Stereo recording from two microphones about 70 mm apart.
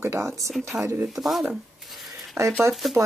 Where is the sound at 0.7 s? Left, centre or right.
Centre.